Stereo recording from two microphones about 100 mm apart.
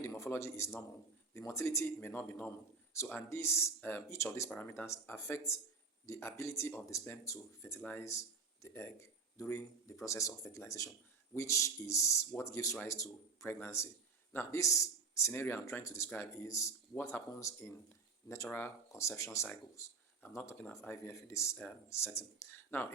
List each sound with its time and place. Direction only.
0.0 s a man's voice: 30° left (ahead or behind)
4.4 s speech: 20° left (ahead or behind)
7.8 s speech: 15° left (ahead or behind)
15.3 s speech: 20° left (ahead or behind)
15.8 s speech: 30° left (ahead or behind)